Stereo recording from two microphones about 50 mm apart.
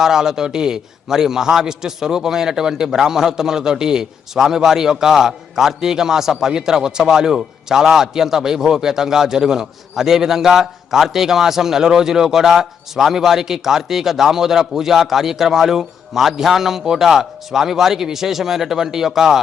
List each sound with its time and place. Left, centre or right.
0.0 s a man's voice: centre